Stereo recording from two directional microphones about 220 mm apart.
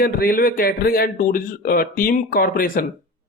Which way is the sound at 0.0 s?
40° left (ahead or behind).